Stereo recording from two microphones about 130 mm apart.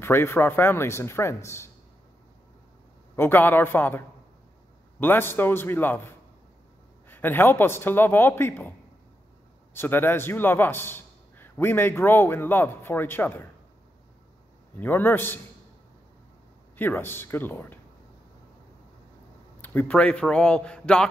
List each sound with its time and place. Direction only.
0.0 s speech: 20° left (ahead or behind)
3.2 s a man's voice: 15° left (ahead or behind)
5.0 s a man's voice: 15° left (ahead or behind)
9.8 s a man's voice: 15° left (ahead or behind)
14.8 s a man's voice: 15° left (ahead or behind)
16.7 s a man's voice: 15° left (ahead or behind)
19.6 s a man's voice: 15° left (ahead or behind)